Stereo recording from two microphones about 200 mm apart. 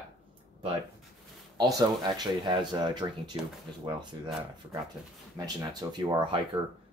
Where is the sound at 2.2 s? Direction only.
20° right (ahead or behind).